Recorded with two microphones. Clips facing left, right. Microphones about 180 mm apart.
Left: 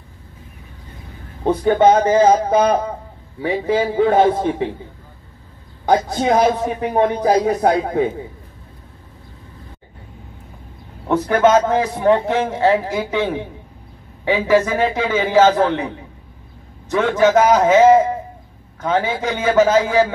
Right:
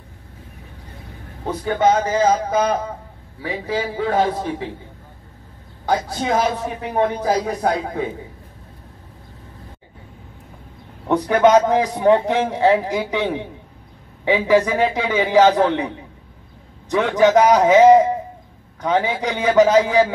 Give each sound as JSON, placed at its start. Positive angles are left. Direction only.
{"t": 1.4, "sound": "a man's voice", "side_deg": 25}
{"t": 5.9, "sound": "a man's voice", "side_deg": 20}
{"t": 6.8, "sound": "speech", "side_deg": 50}
{"t": 11.1, "sound": "a man's voice", "side_deg": -15}
{"t": 16.9, "sound": "a man's voice", "side_deg": -15}